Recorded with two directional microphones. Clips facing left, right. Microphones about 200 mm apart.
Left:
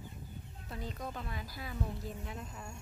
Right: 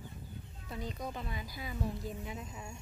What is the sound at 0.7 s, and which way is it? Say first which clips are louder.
Speech: right 2 dB; centre (ahead or behind).